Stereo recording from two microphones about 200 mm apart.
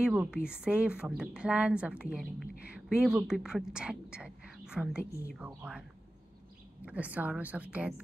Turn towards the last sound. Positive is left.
turn(degrees=-5)  # may be behind; listen again after turning